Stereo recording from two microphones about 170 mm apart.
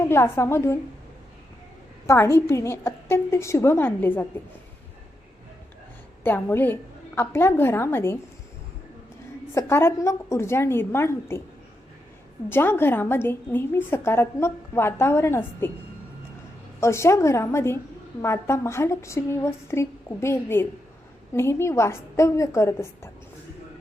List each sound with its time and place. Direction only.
0.1 s a woman's voice: 15° left (ahead or behind)
2.0 s a woman's voice: 15° left (ahead or behind)
6.2 s a woman's voice: 10° left (ahead or behind)
9.6 s a woman's voice: 15° left (ahead or behind)
12.5 s a woman's voice: 15° left (ahead or behind)
16.8 s a woman's voice: 15° left (ahead or behind)